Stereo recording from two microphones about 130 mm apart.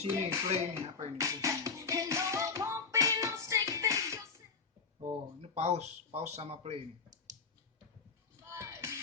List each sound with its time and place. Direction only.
0.1 s music: 20° right (ahead or behind)
5.0 s speech: 55° right (ahead or behind)
8.4 s music: 20° right (ahead or behind)